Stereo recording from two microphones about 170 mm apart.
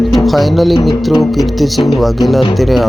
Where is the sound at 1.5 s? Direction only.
Centre (ahead or behind).